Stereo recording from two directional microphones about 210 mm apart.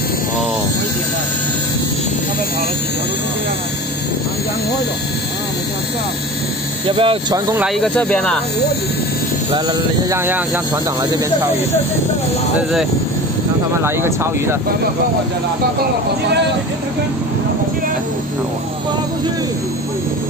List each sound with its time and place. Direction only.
7.0 s speech: 25° right (ahead or behind)
7.5 s speech: centre (ahead or behind)
9.5 s speech: 20° right (ahead or behind)
10.1 s speech: 10° right (ahead or behind)
13.8 s speech: 10° right (ahead or behind)